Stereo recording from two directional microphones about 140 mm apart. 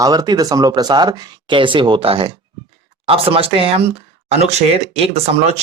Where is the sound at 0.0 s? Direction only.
30° right (ahead or behind).